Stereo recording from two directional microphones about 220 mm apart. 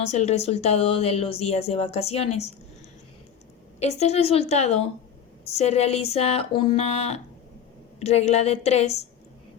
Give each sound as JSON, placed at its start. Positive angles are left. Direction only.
{"t": 0.1, "sound": "speech", "side_deg": 30}
{"t": 3.8, "sound": "speech", "side_deg": 30}